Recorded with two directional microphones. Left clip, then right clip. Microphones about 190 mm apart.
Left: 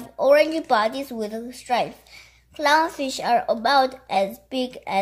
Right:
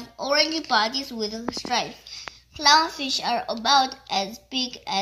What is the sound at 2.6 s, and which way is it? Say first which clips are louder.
A woman's voice: right 1 dB; 55° left (ahead or behind).